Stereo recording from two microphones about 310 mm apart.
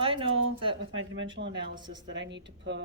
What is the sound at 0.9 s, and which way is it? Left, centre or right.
Speech, right.